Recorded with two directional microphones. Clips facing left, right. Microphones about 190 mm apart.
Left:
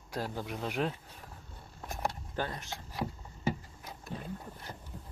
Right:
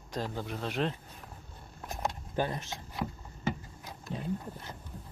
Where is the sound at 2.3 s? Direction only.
20° right (ahead or behind).